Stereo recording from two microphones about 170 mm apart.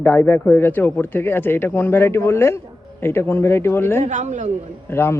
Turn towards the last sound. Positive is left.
turn(degrees=15)  # may be behind; listen again after turning